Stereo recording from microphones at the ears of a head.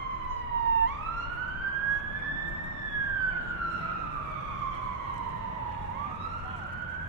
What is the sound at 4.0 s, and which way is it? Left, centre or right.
Emergency vehicle, right.